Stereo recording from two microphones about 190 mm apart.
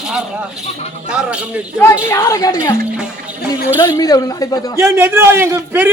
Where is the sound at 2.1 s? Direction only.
15° left (ahead or behind).